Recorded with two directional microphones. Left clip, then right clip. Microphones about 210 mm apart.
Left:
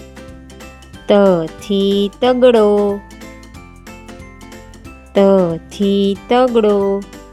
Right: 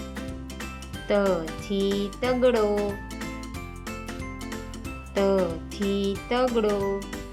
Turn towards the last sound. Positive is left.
turn(degrees=35)  # may be behind; listen again after turning